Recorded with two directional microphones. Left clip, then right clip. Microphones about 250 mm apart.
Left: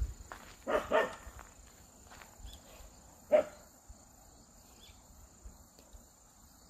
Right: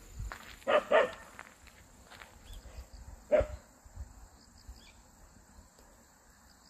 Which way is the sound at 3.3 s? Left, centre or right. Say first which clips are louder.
Even; right.